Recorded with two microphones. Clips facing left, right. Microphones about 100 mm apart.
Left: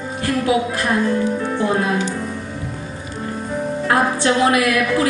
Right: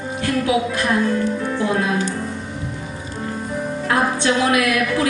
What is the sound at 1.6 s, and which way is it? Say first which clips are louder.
Speech: left 1 dB; 25° left (ahead or behind).